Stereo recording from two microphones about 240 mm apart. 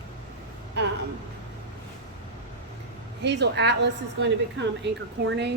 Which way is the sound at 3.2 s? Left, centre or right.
Right.